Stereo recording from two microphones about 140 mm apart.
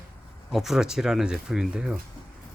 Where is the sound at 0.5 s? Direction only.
Centre (ahead or behind).